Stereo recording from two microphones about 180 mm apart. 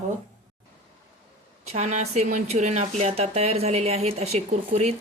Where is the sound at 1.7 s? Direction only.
40° right (ahead or behind).